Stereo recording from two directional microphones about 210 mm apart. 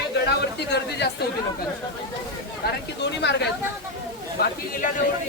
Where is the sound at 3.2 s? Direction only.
55° left (ahead or behind).